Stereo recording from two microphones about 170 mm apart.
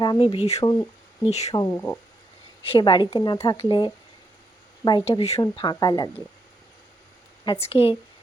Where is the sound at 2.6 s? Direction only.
30° left (ahead or behind).